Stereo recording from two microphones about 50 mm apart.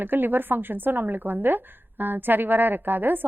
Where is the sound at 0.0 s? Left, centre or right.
Right.